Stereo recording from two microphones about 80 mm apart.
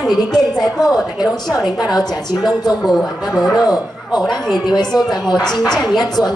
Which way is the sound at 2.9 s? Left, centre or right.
Centre.